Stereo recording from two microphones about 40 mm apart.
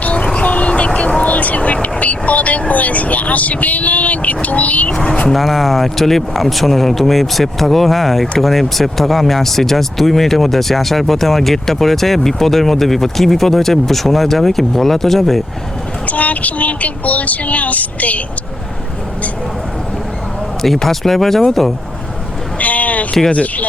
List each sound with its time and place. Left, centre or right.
0.0 s vehicle: left
1.2 s speech: left
4.9 s speech: left
5.3 s speech: centre
16.0 s speech: left
20.8 s speech: centre
22.5 s vehicle: left
23.3 s speech: left